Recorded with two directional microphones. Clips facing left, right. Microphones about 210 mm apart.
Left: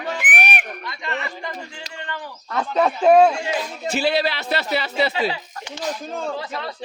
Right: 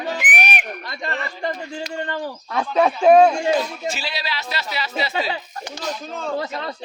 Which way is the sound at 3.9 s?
55° left (ahead or behind).